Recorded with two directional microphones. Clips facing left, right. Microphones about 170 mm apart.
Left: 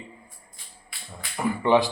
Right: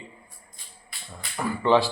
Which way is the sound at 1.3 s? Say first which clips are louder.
Left 1 dB; 15° left (ahead or behind).